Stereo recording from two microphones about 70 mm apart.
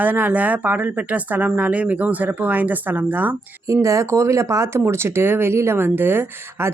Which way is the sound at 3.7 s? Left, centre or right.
Right.